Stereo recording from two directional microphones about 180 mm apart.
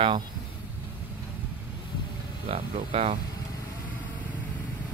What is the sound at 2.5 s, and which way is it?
Speech, 35° right (ahead or behind).